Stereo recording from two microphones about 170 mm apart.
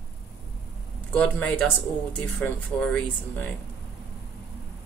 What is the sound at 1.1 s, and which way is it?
Speech, 5° left (ahead or behind).